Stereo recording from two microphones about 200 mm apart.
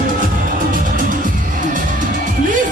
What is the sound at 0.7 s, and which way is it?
Music, 40° right (ahead or behind).